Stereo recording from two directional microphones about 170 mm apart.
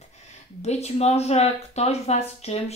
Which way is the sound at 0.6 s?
40° left (ahead or behind).